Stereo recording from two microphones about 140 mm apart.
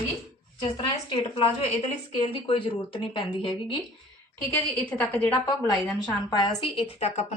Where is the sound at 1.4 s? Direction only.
45° left (ahead or behind).